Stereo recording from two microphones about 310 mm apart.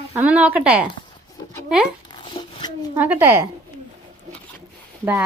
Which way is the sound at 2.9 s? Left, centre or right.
Centre.